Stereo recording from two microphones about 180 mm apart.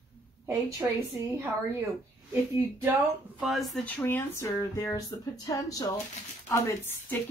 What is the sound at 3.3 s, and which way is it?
Speech, centre (ahead or behind).